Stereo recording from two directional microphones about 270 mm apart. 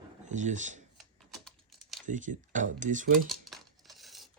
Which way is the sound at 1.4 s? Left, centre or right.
Centre.